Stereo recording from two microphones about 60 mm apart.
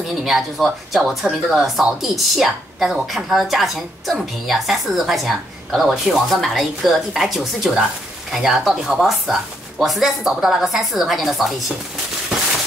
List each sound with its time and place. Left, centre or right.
0.2 s a woman's voice: centre